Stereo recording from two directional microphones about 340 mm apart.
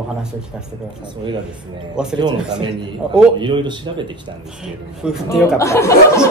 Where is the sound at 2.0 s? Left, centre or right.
Centre.